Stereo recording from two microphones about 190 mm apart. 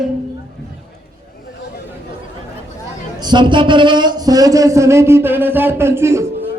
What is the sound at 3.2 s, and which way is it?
Speech, 25° right (ahead or behind).